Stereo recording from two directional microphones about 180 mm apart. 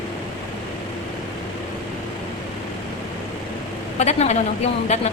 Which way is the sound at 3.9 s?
35° left (ahead or behind).